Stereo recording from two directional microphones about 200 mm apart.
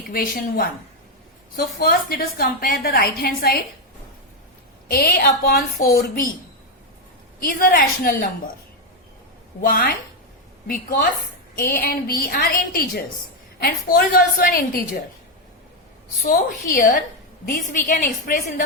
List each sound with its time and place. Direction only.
0.1 s a woman's voice: 45° left (ahead or behind)
4.9 s a woman's voice: 50° left (ahead or behind)
7.3 s a woman's voice: 45° left (ahead or behind)
9.6 s a woman's voice: 45° left (ahead or behind)
11.5 s a woman's voice: 50° left (ahead or behind)
16.2 s a woman's voice: 40° left (ahead or behind)